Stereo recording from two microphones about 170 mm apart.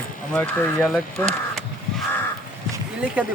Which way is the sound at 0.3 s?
5° left (ahead or behind).